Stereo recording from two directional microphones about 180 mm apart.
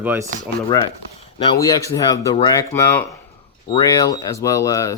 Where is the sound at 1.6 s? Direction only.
20° left (ahead or behind).